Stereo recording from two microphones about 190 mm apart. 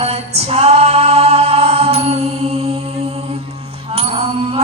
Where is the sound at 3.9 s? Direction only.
30° right (ahead or behind).